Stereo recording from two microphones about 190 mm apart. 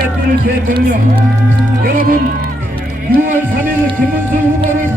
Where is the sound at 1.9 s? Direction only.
50° right (ahead or behind).